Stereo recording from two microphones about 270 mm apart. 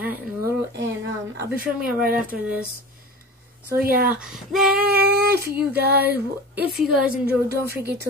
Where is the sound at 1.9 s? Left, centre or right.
Right.